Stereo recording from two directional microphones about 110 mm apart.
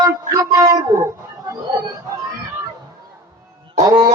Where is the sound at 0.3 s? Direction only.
30° right (ahead or behind).